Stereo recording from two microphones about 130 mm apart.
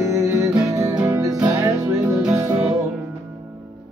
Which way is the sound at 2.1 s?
5° right (ahead or behind).